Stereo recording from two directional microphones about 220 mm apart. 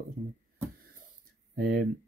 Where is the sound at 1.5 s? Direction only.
45° right (ahead or behind).